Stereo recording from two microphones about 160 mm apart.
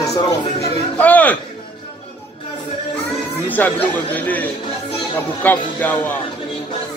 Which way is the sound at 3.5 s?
10° left (ahead or behind).